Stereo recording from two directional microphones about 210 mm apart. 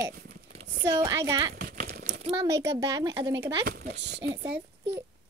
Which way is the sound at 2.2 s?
25° right (ahead or behind).